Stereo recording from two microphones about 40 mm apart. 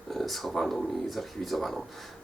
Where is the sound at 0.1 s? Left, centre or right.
Centre.